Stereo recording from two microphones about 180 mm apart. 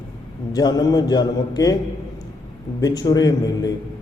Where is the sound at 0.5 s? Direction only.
20° left (ahead or behind).